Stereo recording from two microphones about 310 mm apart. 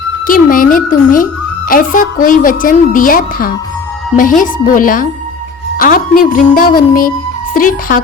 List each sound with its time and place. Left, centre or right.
0.3 s a woman's voice: left
4.6 s a woman's voice: left